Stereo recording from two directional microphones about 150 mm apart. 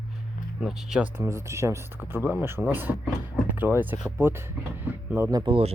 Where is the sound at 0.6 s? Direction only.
Centre (ahead or behind).